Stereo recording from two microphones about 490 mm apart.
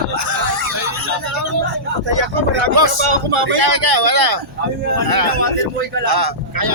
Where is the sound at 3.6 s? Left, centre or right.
Right.